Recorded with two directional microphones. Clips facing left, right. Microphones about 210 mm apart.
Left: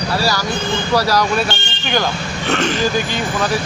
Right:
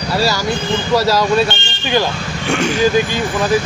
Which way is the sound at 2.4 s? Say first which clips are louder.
Right 1 dB; 10° right (ahead or behind).